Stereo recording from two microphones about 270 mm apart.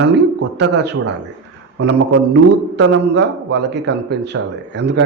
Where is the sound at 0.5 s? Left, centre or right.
Right.